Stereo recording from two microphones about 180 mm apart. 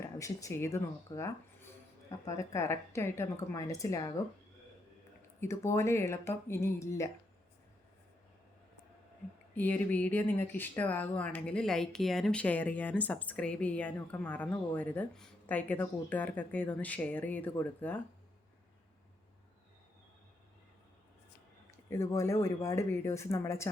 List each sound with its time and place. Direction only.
0.2 s speech: 15° left (ahead or behind)
5.4 s speech: 15° left (ahead or behind)
9.6 s speech: 10° left (ahead or behind)
21.8 s speech: 15° left (ahead or behind)